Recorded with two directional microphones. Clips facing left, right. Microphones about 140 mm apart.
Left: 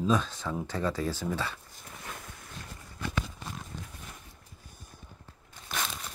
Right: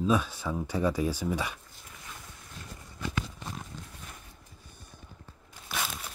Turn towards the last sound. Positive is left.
turn(degrees=-5)  # may be behind; listen again after turning